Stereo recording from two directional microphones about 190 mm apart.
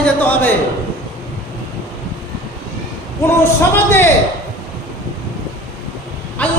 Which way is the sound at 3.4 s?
10° left (ahead or behind).